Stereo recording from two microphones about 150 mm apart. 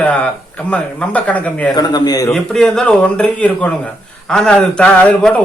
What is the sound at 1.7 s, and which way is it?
Speech, 25° left (ahead or behind).